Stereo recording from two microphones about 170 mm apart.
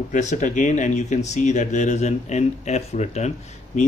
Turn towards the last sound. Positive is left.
turn(degrees=40)  # may be behind; listen again after turning